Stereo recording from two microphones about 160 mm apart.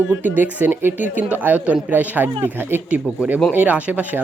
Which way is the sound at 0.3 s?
10° right (ahead or behind).